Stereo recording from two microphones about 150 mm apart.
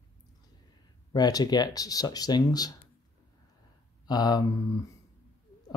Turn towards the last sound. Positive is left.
turn(degrees=25)  # may be behind; listen again after turning